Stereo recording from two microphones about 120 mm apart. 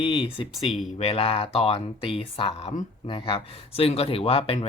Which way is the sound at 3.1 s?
45° left (ahead or behind).